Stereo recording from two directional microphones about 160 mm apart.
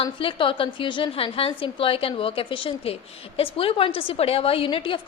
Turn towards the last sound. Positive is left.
turn(degrees=35)  # may be behind; listen again after turning